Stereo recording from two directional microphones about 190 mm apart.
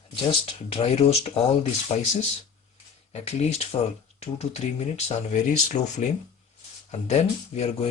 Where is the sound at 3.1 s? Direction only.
35° left (ahead or behind).